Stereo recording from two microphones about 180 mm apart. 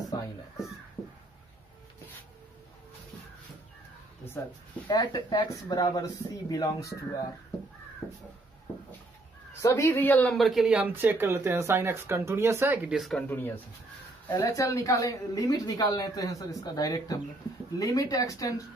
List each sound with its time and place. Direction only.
4.8 s speech: 25° left (ahead or behind)
8.0 s crow: 10° right (ahead or behind)
9.6 s speech: 15° left (ahead or behind); by 13.2 s centre (ahead or behind)
13.3 s speech: 10° left (ahead or behind)